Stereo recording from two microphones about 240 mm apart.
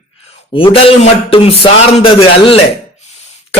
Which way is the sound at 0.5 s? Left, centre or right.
Left.